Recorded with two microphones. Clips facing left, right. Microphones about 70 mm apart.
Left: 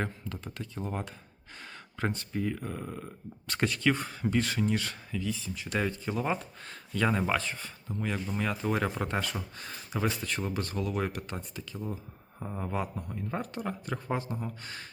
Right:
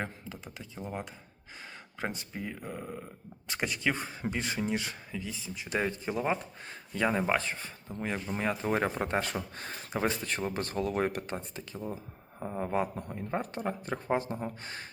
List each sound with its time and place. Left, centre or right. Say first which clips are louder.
0.0 s speech: left 3 dB; centre; by 14.8 s right